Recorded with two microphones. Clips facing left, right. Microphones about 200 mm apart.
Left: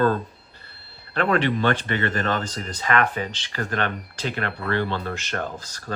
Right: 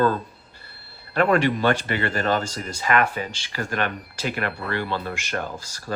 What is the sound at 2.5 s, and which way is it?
Speech, 10° right (ahead or behind).